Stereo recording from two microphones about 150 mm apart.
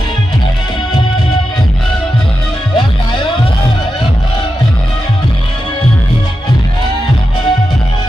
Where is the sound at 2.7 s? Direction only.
35° left (ahead or behind).